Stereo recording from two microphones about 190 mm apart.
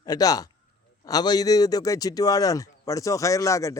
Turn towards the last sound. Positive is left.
turn(degrees=15)  # may be behind; listen again after turning